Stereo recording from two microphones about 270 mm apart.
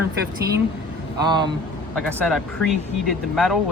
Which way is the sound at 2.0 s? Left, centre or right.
Centre.